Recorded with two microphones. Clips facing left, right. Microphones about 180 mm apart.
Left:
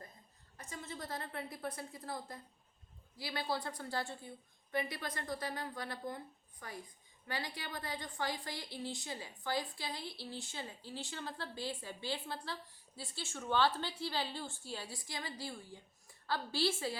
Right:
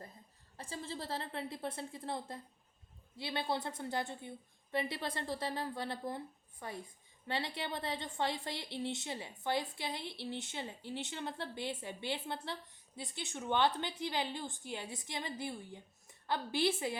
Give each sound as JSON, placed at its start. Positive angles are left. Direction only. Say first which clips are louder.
{"t": 0.5, "sound": "a woman's voice", "louder": "right 4 dB", "side_deg": -30}